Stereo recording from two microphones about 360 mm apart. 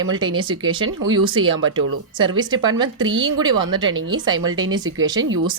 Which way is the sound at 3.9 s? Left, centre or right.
Right.